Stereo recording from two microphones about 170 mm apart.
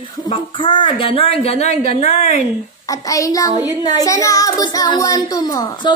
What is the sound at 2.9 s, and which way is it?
A child's voice, 20° left (ahead or behind).